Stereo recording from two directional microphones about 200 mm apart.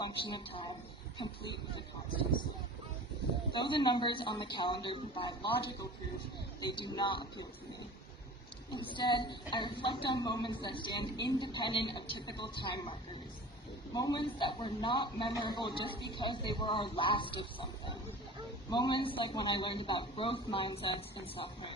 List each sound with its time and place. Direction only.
0.3 s a man's voice: 25° left (ahead or behind)
3.5 s a man's voice: 25° left (ahead or behind)
6.6 s a man's voice: 20° left (ahead or behind)
8.7 s a man's voice: 25° left (ahead or behind)